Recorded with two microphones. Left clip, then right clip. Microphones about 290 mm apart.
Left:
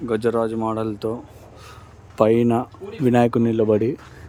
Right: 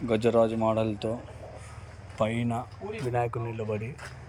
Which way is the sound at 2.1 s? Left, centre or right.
Centre.